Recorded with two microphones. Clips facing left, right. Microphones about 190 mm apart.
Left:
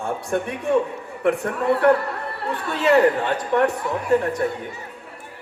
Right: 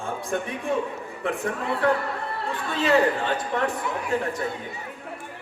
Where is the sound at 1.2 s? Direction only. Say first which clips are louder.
Left 7 dB; 65° left (ahead or behind).